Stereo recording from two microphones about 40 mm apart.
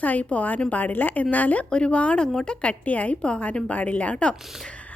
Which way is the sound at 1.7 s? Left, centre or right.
Left.